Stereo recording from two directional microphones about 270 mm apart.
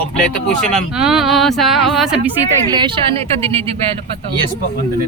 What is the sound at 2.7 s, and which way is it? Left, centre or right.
Speech, centre.